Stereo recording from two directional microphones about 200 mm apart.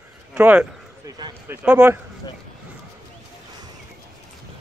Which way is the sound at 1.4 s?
10° right (ahead or behind).